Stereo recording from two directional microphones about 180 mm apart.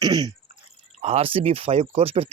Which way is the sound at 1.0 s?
30° right (ahead or behind).